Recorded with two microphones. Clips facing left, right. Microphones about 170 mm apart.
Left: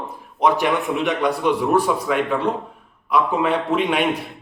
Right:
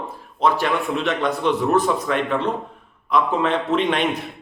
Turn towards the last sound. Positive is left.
turn(degrees=10)  # may be behind; listen again after turning